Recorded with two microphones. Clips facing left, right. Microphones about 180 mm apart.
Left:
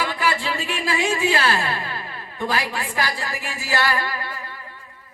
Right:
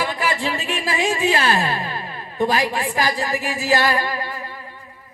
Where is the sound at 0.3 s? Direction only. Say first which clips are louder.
Right 1 dB; 20° right (ahead or behind).